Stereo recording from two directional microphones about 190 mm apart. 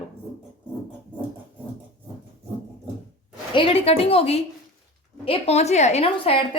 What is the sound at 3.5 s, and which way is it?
A woman's voice, 30° left (ahead or behind).